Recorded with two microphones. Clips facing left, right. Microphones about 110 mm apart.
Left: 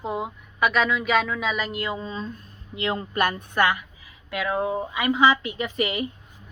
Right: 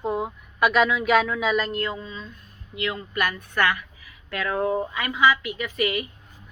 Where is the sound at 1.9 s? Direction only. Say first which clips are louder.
Left 5 dB; 35° left (ahead or behind).